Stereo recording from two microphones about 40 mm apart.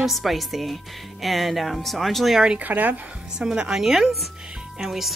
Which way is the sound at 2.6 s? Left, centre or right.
Right.